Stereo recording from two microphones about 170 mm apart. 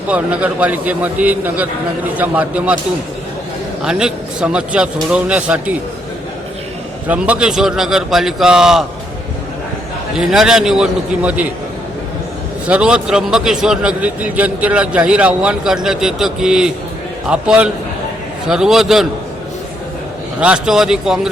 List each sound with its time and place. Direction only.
0.1 s a man's voice: 10° right (ahead or behind)
3.8 s a man's voice: 5° right (ahead or behind)
7.1 s a man's voice: 5° right (ahead or behind)
10.2 s a man's voice: 5° right (ahead or behind)
12.6 s a man's voice: 5° right (ahead or behind)
20.4 s a man's voice: 5° right (ahead or behind)